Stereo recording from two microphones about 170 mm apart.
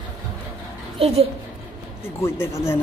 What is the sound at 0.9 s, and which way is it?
Speech, 35° right (ahead or behind).